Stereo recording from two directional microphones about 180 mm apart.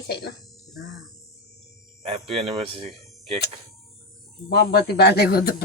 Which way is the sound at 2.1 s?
30° right (ahead or behind).